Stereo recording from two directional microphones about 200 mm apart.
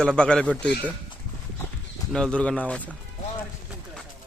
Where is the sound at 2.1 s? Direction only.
5° left (ahead or behind).